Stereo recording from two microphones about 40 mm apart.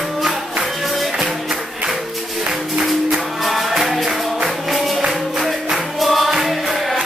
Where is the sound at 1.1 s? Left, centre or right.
Centre.